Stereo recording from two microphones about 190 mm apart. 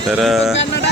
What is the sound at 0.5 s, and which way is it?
Speech, 70° left (ahead or behind).